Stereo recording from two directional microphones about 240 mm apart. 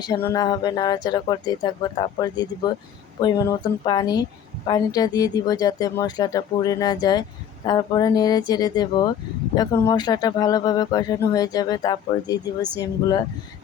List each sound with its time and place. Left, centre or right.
0.0 s a woman's voice: centre